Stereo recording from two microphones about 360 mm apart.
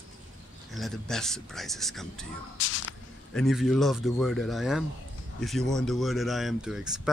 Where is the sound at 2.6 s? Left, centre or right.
Left.